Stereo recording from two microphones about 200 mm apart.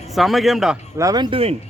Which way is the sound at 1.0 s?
20° right (ahead or behind).